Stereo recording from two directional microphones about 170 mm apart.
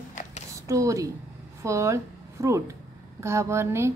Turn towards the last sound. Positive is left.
turn(degrees=-15)  # may be behind; listen again after turning